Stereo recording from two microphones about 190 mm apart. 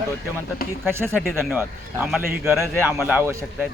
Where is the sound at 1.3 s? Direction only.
5° right (ahead or behind).